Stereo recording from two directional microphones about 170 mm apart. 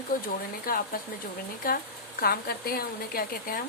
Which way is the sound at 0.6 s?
60° left (ahead or behind).